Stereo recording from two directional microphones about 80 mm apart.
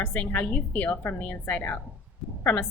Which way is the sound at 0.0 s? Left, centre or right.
Left.